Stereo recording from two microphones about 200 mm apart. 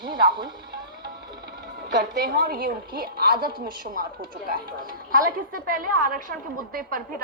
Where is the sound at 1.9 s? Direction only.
50° right (ahead or behind).